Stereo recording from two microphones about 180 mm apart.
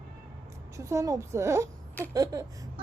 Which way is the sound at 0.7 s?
15° right (ahead or behind).